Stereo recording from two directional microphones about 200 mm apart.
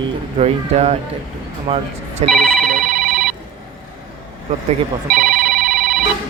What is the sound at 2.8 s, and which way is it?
Telephone, 45° right (ahead or behind).